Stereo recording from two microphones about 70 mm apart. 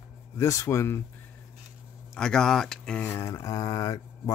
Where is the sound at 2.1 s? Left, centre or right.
Centre.